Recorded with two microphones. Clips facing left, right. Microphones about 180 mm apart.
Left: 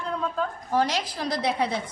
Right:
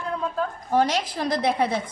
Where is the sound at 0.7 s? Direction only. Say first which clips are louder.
Right 3 dB; 50° right (ahead or behind).